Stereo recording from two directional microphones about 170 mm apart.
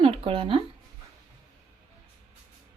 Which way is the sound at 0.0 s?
30° right (ahead or behind).